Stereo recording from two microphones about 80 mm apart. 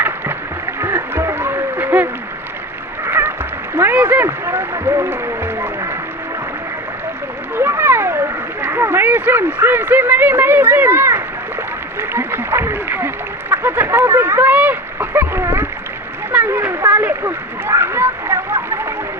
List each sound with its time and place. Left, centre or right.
0.8 s a sound: right
7.5 s splash: right
11.9 s speech: right
14.5 s splash: right
16.5 s speech: right
17.2 s splash: right